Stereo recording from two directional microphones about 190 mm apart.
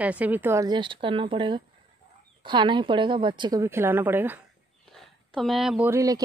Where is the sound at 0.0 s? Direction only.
10° right (ahead or behind).